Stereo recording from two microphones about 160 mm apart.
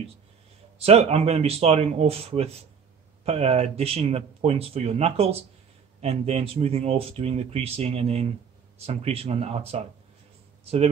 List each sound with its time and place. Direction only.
0.7 s a man's voice: 40° right (ahead or behind)